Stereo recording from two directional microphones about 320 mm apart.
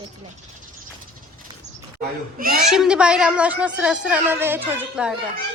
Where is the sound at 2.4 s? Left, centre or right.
Right.